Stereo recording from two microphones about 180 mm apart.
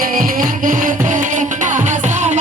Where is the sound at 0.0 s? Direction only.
50° right (ahead or behind).